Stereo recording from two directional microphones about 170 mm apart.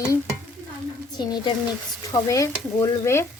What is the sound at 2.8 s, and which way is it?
Stir, 15° left (ahead or behind).